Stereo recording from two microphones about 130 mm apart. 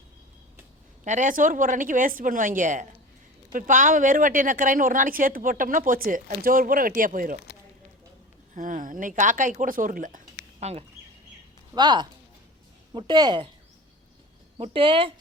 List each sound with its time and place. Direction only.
1.0 s a woman's voice: 70° right (ahead or behind); by 7.3 s 90° right
8.5 s speech: 90° right; by 10.8 s 55° right (ahead or behind)
11.7 s speech: 35° right (ahead or behind)
14.7 s speech: 40° right (ahead or behind)